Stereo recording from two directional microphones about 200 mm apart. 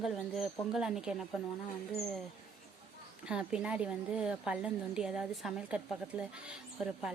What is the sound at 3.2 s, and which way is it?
A woman's voice, 5° right (ahead or behind).